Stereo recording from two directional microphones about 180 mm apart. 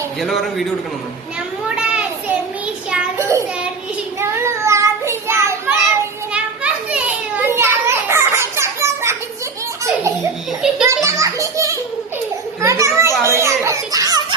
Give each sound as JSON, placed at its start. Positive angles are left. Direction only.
{"t": 0.2, "sound": "a man's voice", "side_deg": 0}
{"t": 1.6, "sound": "children playing", "side_deg": -5}
{"t": 4.2, "sound": "child singing", "side_deg": -15}
{"t": 6.3, "sound": "children playing", "side_deg": -5}
{"t": 10.8, "sound": "children playing", "side_deg": -15}